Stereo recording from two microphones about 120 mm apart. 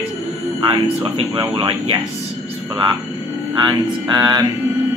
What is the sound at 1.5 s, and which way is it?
Speech, 45° right (ahead or behind).